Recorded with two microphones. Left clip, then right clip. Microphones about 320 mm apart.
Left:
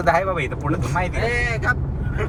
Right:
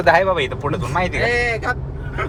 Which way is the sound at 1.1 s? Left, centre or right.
Right.